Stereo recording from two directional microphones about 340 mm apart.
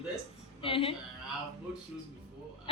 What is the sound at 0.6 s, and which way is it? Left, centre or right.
Speech, centre.